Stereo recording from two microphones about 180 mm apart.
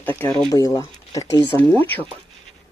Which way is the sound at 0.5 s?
20° left (ahead or behind).